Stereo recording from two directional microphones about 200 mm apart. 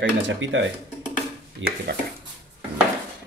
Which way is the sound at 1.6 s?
70° right (ahead or behind).